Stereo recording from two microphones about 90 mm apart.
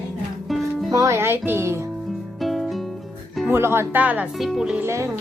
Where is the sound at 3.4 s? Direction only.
25° right (ahead or behind).